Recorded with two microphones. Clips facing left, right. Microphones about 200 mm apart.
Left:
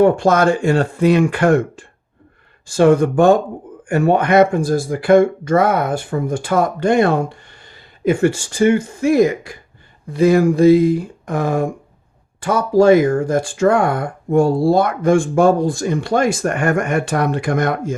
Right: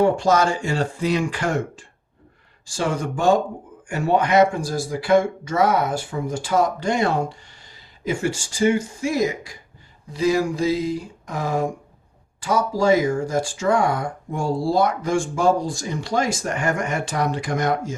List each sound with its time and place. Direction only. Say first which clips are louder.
0.0 s speech: left 5 dB; 55° left (ahead or behind)